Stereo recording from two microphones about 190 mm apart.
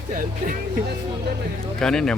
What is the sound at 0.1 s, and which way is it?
Speech, 45° right (ahead or behind).